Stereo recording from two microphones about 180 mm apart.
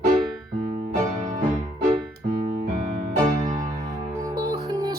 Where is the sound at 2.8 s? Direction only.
45° right (ahead or behind).